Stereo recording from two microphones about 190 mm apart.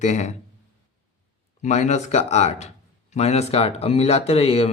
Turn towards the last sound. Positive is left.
turn(degrees=30)  # may be behind; listen again after turning